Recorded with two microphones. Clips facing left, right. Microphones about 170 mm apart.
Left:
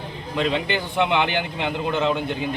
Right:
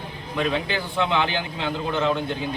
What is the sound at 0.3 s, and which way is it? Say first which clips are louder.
A man's voice: left 2 dB; 20° left (ahead or behind).